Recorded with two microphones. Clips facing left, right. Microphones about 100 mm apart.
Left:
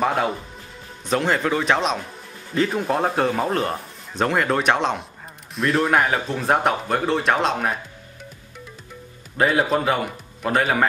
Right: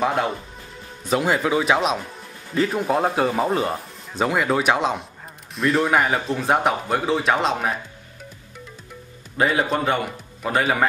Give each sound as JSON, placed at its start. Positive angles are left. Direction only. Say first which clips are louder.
{"t": 0.0, "sound": "speech", "louder": "even", "side_deg": 0}
{"t": 9.4, "sound": "speech", "louder": "left 1 dB", "side_deg": 0}